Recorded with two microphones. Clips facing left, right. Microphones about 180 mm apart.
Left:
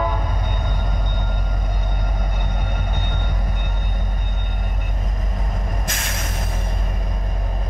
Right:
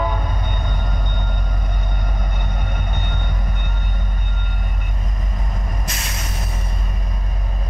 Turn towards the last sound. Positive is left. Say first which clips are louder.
# left 1 dB
turn(degrees=50)  # may be behind; listen again after turning